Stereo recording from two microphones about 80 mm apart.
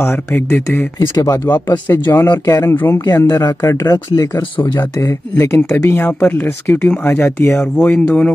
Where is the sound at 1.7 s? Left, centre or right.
Left.